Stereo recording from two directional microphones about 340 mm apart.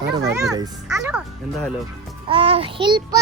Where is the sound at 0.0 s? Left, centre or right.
Right.